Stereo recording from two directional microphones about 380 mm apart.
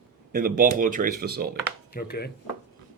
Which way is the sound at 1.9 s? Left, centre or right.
Left.